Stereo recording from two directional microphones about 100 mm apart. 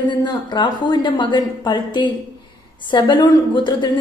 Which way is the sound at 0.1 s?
50° left (ahead or behind).